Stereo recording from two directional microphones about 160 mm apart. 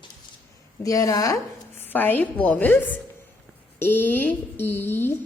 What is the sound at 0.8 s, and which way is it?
A woman's voice, 20° left (ahead or behind).